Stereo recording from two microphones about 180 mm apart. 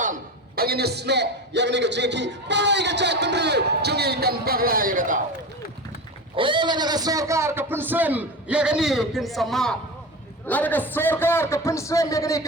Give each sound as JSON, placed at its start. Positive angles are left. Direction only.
{"t": 0.0, "sound": "a man's voice", "side_deg": -50}
{"t": 6.3, "sound": "a man's voice", "side_deg": -25}